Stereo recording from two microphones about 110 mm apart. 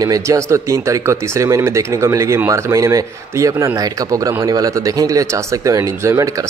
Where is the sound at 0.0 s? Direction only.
30° right (ahead or behind).